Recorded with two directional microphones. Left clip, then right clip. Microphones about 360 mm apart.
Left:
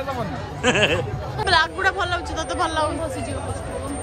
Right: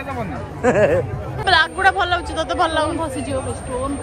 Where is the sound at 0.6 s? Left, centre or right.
Centre.